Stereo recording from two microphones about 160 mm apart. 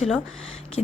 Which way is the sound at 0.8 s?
45° left (ahead or behind).